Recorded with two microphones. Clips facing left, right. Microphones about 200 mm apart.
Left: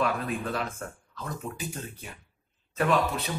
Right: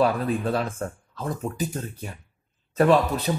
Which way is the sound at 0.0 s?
35° right (ahead or behind).